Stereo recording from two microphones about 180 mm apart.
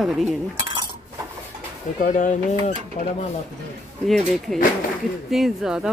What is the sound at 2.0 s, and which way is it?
Speech, 45° left (ahead or behind).